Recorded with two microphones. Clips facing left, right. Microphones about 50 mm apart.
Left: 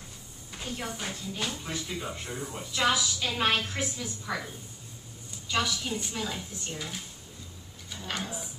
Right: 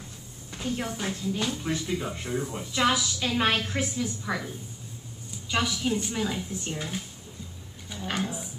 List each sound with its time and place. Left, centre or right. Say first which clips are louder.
0.5 s speech: right 5 dB; centre
5.5 s speech: right 3 dB; centre
8.0 s speech: right 4 dB; centre